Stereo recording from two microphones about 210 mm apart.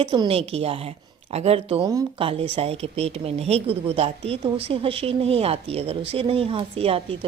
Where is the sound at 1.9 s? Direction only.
15° right (ahead or behind).